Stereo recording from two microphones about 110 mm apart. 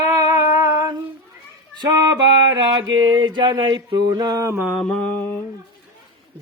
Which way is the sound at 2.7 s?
40° right (ahead or behind).